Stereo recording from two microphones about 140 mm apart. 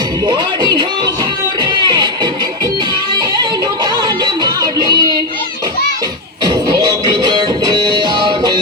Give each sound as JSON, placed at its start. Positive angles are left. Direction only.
{"t": 0.3, "sound": "a sound", "side_deg": -30}
{"t": 1.6, "sound": "music", "side_deg": -30}
{"t": 3.9, "sound": "music", "side_deg": -30}
{"t": 7.1, "sound": "music", "side_deg": -30}